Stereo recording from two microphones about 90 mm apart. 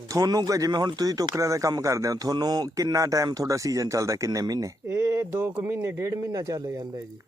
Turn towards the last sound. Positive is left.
turn(degrees=-50)  # may be behind; listen again after turning